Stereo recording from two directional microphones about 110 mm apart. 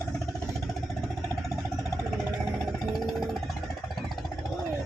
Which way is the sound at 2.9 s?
Centre (ahead or behind).